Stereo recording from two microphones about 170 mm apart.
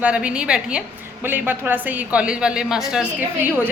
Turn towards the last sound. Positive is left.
turn(degrees=-10)  # may be behind; listen again after turning